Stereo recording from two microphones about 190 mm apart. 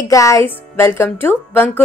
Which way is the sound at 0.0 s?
15° left (ahead or behind).